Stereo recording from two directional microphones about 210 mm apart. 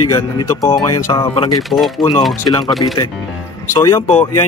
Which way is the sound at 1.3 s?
25° left (ahead or behind).